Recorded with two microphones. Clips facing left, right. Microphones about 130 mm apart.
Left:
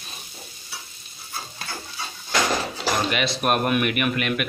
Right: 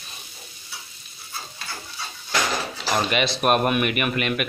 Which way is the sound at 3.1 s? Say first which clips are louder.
Right 2 dB; centre (ahead or behind).